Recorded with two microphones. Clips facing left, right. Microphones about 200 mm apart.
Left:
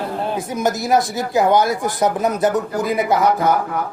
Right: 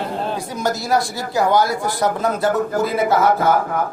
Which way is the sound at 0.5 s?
20° left (ahead or behind).